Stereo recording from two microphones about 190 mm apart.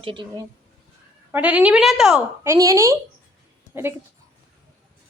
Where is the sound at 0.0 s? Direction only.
25° right (ahead or behind).